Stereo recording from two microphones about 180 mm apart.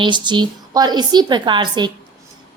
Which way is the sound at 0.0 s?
25° right (ahead or behind).